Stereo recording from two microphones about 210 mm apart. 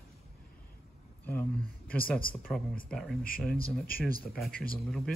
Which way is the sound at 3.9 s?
45° left (ahead or behind).